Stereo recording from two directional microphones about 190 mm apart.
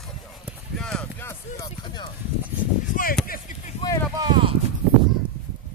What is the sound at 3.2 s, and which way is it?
Speech, 45° left (ahead or behind).